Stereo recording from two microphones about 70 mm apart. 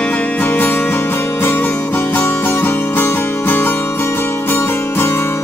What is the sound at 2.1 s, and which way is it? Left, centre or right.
Music, left.